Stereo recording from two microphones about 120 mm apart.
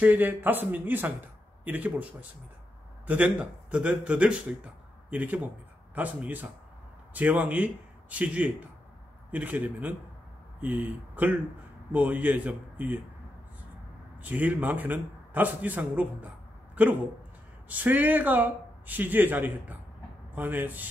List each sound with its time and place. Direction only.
0.0 s a man's voice: 15° right (ahead or behind)
14.2 s a man's voice: 15° right (ahead or behind)
17.6 s a man's voice: 15° right (ahead or behind)